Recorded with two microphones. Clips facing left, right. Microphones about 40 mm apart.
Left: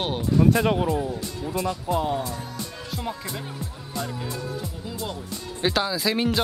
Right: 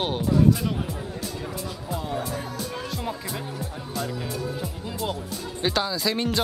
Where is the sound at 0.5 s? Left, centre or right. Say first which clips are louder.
Left 3 dB; left.